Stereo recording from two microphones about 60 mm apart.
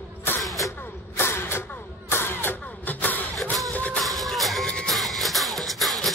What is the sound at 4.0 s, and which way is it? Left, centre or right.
Music, centre.